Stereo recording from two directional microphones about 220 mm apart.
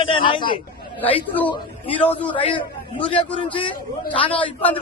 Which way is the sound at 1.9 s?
25° left (ahead or behind).